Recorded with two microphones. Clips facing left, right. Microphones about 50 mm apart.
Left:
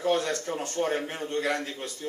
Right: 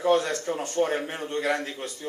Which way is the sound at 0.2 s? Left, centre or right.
Centre.